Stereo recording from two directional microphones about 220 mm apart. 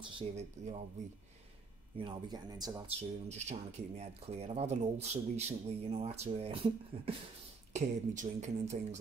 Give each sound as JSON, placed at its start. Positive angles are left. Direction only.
{"t": 0.0, "sound": "speech", "side_deg": -30}
{"t": 2.0, "sound": "speech", "side_deg": -20}
{"t": 3.0, "sound": "speech", "side_deg": -30}